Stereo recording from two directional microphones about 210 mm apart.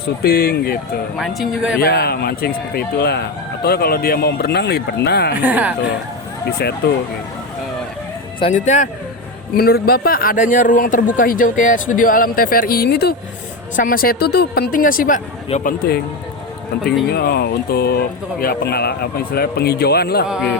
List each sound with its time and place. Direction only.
0.2 s speech: 45° left (ahead or behind)
1.2 s a man's voice: centre (ahead or behind)
1.8 s speech: 50° left (ahead or behind)
5.4 s speech: 5° right (ahead or behind)
6.8 s speech: 50° left (ahead or behind)
8.4 s a man's voice: 35° left (ahead or behind)
9.6 s a man's voice: 45° left (ahead or behind)
17.1 s speech: 50° left (ahead or behind)
20.2 s a man's voice: centre (ahead or behind)